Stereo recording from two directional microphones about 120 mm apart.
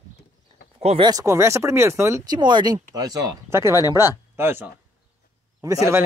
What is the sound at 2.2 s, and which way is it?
Speech, 40° right (ahead or behind).